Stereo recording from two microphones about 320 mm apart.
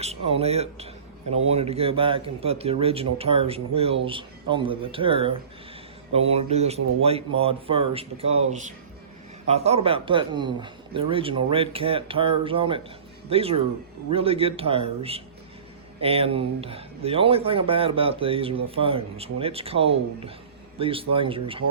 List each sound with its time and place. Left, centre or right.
0.0 s speech: centre